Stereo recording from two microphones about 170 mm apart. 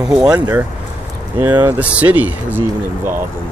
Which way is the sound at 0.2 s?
20° right (ahead or behind).